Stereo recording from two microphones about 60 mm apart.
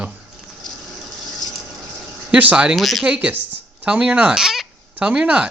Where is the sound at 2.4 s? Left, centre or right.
Right.